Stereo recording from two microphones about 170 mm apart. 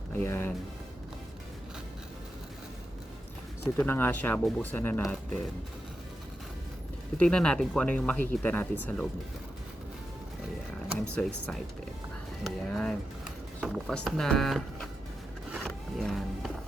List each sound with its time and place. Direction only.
0.1 s speech: 15° left (ahead or behind)
3.6 s speech: 15° left (ahead or behind)
7.2 s speech: 5° left (ahead or behind)
11.0 s speech: 5° left (ahead or behind)
15.5 s music: centre (ahead or behind)